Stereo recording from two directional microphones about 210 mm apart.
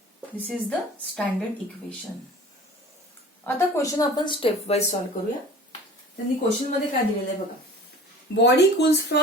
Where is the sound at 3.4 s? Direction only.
15° left (ahead or behind).